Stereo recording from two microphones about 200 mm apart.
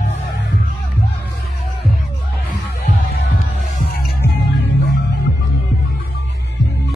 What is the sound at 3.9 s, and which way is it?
Music, 50° left (ahead or behind).